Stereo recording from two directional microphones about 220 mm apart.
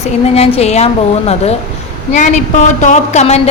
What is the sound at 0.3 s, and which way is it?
Speech, 25° left (ahead or behind).